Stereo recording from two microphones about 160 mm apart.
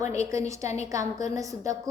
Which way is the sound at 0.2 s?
20° right (ahead or behind).